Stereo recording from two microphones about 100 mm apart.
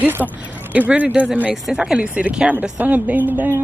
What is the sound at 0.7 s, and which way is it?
Speech, 15° right (ahead or behind).